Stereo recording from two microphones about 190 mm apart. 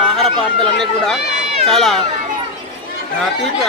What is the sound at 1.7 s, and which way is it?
Speech, centre (ahead or behind).